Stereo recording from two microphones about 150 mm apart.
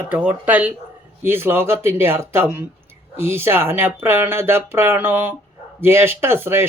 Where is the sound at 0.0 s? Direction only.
10° right (ahead or behind).